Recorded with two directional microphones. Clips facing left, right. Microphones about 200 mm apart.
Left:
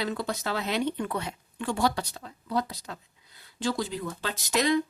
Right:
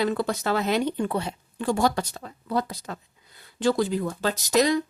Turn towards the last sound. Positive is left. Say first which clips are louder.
# right 4 dB
turn(degrees=-40)  # may be behind; listen again after turning